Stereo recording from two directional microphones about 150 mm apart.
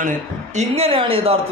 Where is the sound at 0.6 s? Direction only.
40° right (ahead or behind).